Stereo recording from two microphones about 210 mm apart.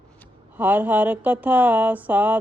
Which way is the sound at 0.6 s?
10° right (ahead or behind).